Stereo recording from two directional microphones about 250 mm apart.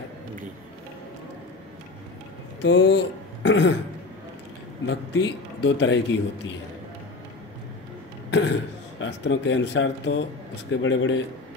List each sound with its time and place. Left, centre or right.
2.6 s speech: left
4.8 s a man's voice: left
8.3 s throat clearing: left
9.0 s a man's voice: left